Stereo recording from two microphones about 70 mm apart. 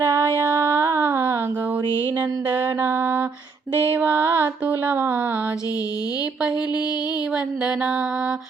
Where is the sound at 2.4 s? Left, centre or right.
Right.